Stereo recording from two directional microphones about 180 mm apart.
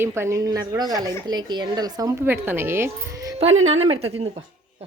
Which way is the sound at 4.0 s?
35° right (ahead or behind).